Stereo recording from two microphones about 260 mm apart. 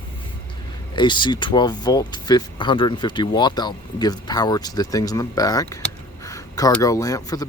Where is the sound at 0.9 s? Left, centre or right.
Centre.